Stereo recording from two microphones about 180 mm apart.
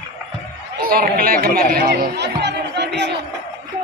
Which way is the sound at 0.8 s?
55° right (ahead or behind).